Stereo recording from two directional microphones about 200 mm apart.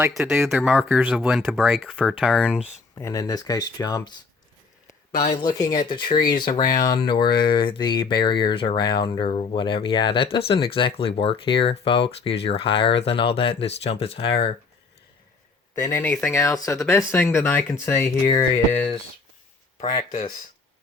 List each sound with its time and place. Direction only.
0.2 s speech: centre (ahead or behind)
2.9 s speech: 15° left (ahead or behind)
5.6 s speech: 20° left (ahead or behind)
15.9 s speech: 10° left (ahead or behind)
19.8 s speech: 40° left (ahead or behind)